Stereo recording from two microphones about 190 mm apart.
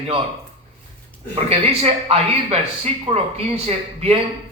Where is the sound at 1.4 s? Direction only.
30° right (ahead or behind).